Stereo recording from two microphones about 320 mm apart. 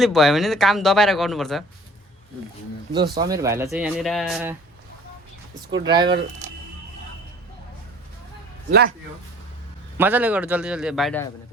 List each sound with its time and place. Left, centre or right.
0.0 s speech: centre
2.9 s speech: centre
5.8 s speech: centre
8.7 s speech: right
10.0 s speech: centre